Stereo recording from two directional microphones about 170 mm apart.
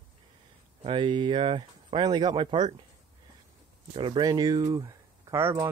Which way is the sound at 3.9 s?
30° right (ahead or behind).